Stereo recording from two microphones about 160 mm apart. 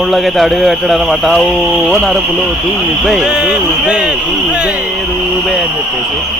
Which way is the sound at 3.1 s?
5° right (ahead or behind).